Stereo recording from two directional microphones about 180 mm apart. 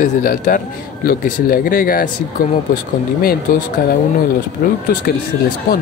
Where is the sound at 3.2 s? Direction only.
55° left (ahead or behind).